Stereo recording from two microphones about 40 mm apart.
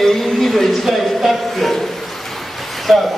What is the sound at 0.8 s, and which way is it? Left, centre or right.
Speech, centre.